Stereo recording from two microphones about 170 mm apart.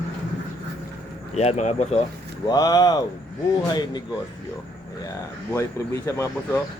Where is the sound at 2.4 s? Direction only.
20° left (ahead or behind).